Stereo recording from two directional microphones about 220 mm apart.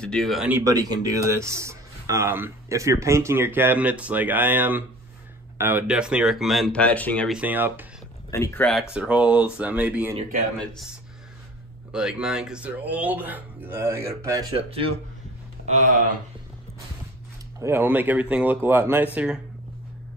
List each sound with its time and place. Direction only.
0.0 s speech: 5° left (ahead or behind)
8.3 s speech: 15° left (ahead or behind); by 10.1 s 5° right (ahead or behind)
11.9 s speech: 5° right (ahead or behind)
14.5 s speech: 25° right (ahead or behind)
17.6 s speech: 10° right (ahead or behind)